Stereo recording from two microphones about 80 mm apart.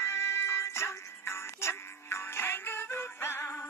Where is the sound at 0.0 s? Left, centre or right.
Left.